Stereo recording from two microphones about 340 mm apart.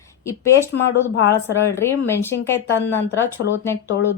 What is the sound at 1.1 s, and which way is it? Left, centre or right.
Speech, left.